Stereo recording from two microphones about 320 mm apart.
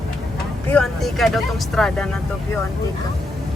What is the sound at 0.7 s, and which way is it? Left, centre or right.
Speech, centre.